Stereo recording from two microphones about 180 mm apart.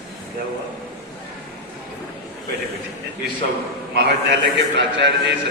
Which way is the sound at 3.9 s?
75° right (ahead or behind).